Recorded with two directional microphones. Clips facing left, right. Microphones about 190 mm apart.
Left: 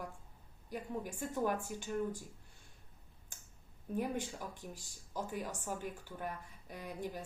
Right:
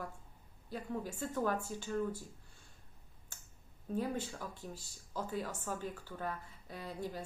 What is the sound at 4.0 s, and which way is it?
Speech, 15° left (ahead or behind).